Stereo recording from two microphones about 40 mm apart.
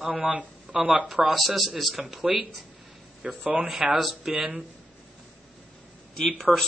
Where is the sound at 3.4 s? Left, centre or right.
Right.